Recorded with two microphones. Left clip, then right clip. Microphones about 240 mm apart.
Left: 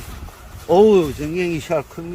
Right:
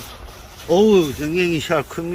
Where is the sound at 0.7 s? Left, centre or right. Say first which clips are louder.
Left 2 dB; centre.